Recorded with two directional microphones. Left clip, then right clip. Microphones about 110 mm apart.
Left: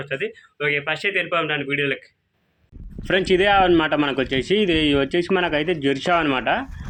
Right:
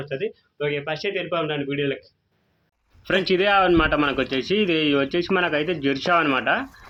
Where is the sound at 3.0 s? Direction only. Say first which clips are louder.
Left 2 dB; 35° left (ahead or behind).